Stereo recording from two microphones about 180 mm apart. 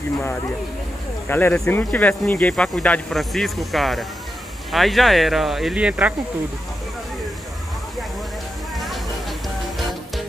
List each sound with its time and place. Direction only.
1.3 s speech: 10° left (ahead or behind); by 6.1 s 5° right (ahead or behind)
8.7 s a sound: centre (ahead or behind)
9.6 s music: centre (ahead or behind)